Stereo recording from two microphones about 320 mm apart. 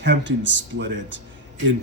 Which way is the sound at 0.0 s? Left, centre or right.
Right.